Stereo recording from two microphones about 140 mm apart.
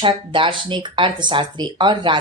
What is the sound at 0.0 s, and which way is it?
Speech, 35° right (ahead or behind).